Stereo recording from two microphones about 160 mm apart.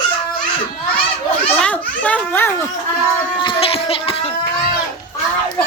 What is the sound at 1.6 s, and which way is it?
Baby laughter, 10° left (ahead or behind).